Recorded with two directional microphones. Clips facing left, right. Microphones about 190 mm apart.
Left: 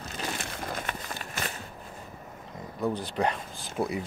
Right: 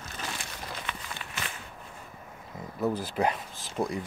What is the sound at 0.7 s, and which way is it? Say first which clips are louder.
Walk: left 3 dB; 45° left (ahead or behind).